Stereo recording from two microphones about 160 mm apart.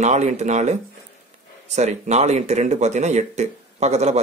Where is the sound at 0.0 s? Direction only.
45° right (ahead or behind).